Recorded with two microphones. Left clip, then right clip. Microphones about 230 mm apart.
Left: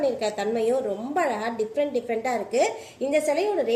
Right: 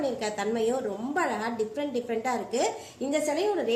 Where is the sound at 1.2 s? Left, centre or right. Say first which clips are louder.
Left 3 dB; right.